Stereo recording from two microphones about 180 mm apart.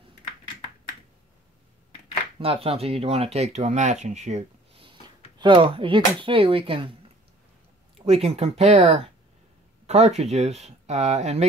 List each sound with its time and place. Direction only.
2.3 s speech: 30° right (ahead or behind)